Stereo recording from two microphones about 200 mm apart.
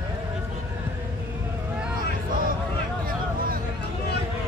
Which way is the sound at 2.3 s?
45° right (ahead or behind).